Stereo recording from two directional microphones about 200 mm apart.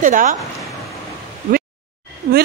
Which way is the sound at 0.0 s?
40° right (ahead or behind).